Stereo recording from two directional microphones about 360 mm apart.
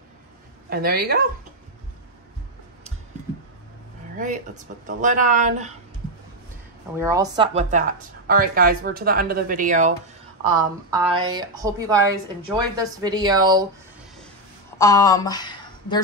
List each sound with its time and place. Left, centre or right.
0.7 s speech: right
4.8 s speech: right
7.0 s a woman's voice: centre
14.8 s speech: centre